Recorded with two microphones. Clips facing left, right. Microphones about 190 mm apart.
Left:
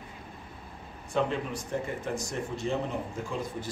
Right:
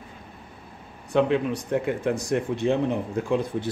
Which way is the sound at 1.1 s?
65° right (ahead or behind).